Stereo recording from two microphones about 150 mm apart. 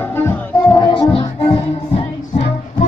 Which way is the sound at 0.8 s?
30° left (ahead or behind).